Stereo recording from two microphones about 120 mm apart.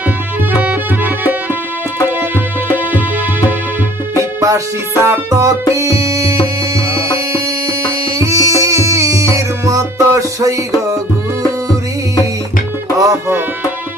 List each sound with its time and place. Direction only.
0.5 s music: 10° right (ahead or behind)
4.4 s music: 25° right (ahead or behind)
8.2 s music: 25° right (ahead or behind)
13.0 s music: 25° right (ahead or behind)